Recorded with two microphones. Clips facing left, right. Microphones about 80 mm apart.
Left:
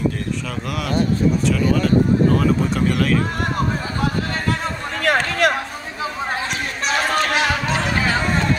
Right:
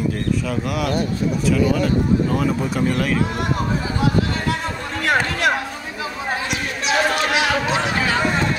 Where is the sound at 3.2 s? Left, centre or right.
Left.